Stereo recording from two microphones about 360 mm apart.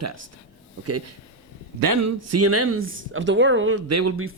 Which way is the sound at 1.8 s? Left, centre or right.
Right.